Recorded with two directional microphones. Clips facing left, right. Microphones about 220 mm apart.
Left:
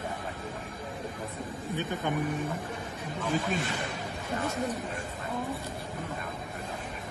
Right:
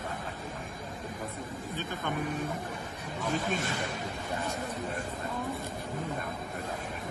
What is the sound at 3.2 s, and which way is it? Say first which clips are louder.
Speech: left 1 dB; 45° right (ahead or behind).